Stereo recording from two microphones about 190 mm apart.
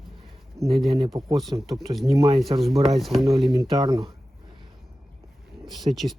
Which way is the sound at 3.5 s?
20° right (ahead or behind).